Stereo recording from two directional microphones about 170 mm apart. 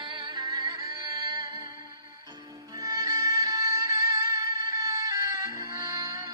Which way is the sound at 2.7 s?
20° right (ahead or behind).